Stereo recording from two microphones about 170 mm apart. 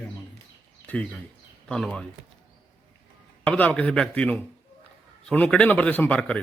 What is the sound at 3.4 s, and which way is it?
A man's voice, 10° left (ahead or behind).